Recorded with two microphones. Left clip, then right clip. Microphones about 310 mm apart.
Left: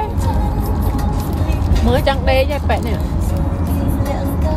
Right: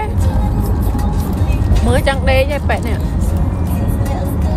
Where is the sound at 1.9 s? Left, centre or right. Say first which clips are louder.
Right 1 dB; centre.